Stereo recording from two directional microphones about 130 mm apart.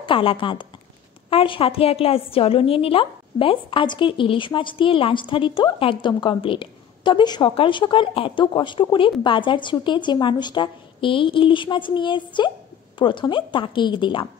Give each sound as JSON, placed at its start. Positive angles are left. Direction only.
{"t": 0.0, "sound": "a woman's voice", "side_deg": 40}